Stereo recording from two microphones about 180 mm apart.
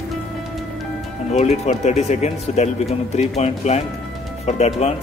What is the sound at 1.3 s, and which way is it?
Speech, 40° left (ahead or behind).